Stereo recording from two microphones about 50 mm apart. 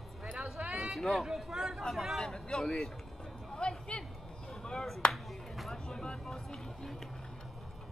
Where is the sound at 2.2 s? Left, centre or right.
Centre.